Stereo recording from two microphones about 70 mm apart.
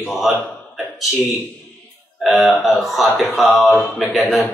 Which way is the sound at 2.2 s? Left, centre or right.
Centre.